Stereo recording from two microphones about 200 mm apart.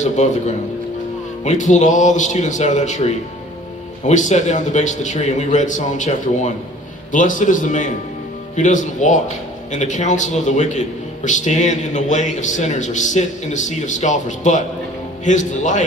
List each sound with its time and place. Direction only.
0.0 s a man's voice: 35° left (ahead or behind)